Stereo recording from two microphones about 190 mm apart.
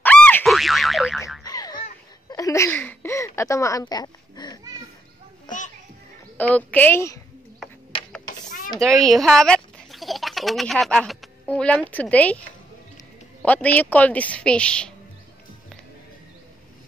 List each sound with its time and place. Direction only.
0.0 s boing: 10° left (ahead or behind)
1.4 s boing: 20° left (ahead or behind)
2.2 s a sound: 15° left (ahead or behind)
6.3 s a man's voice: 10° left (ahead or behind)
8.3 s a sound: 45° left (ahead or behind)
8.7 s speech: centre (ahead or behind)
13.4 s a man's voice: 10° left (ahead or behind)